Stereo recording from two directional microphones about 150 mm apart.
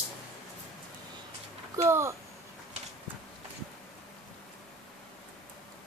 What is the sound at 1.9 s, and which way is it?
Speech, 20° right (ahead or behind).